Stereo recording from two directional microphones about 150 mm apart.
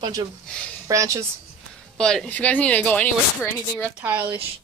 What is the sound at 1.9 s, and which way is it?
Speech, 5° left (ahead or behind).